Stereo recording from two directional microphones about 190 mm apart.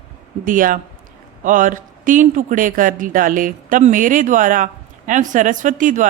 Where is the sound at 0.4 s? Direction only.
45° right (ahead or behind).